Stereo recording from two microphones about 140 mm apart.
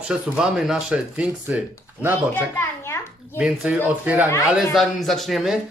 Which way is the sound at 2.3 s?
20° left (ahead or behind).